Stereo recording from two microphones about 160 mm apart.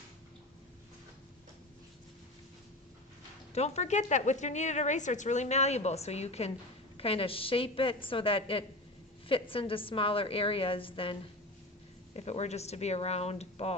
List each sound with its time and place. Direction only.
3.5 s a woman's voice: 40° left (ahead or behind)